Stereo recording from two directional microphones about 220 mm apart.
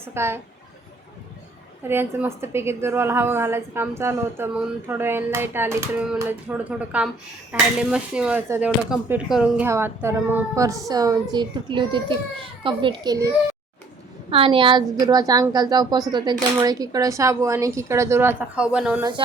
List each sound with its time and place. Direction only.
0.0 s speech: 10° right (ahead or behind)
1.9 s speech: 10° right (ahead or behind)